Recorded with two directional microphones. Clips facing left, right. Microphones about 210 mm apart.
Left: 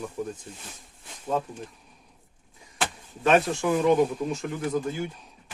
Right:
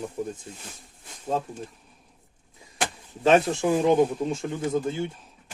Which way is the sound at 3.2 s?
30° right (ahead or behind).